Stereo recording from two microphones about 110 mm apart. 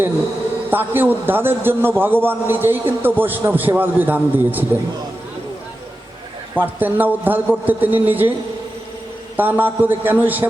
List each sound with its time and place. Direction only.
0.7 s a man's voice: 15° right (ahead or behind)
6.5 s a man's voice: 15° right (ahead or behind)
9.4 s a man's voice: 15° right (ahead or behind)